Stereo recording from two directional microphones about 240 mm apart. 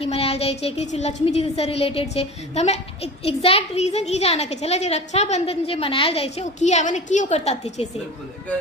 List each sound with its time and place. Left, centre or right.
0.0 s a woman's voice: left